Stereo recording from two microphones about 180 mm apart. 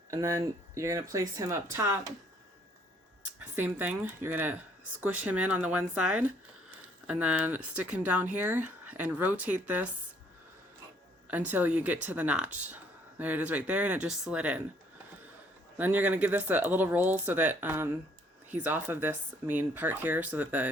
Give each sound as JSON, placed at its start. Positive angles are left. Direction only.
{"t": 0.1, "sound": "speech", "side_deg": -15}
{"t": 3.4, "sound": "speech", "side_deg": -10}
{"t": 11.3, "sound": "speech", "side_deg": -10}
{"t": 15.8, "sound": "speech", "side_deg": -10}